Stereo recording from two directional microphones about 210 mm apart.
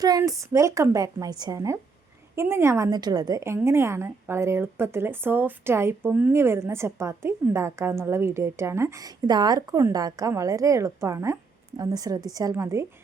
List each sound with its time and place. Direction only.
0.0 s a woman's voice: 15° right (ahead or behind)